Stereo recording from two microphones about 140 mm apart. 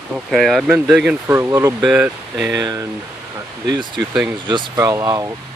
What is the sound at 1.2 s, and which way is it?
Speech, 20° right (ahead or behind).